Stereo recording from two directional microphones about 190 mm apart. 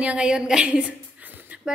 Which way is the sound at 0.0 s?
5° right (ahead or behind).